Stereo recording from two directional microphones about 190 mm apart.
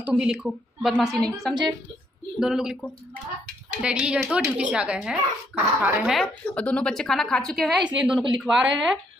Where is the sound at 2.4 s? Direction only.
5° right (ahead or behind).